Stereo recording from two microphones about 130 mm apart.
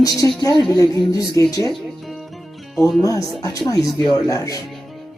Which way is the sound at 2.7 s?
Centre (ahead or behind).